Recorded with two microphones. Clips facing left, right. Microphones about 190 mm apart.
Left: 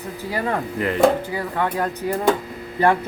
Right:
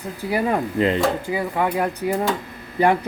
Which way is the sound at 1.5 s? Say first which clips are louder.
Even; 10° right (ahead or behind).